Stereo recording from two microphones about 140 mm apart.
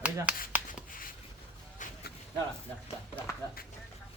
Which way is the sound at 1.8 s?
65° left (ahead or behind).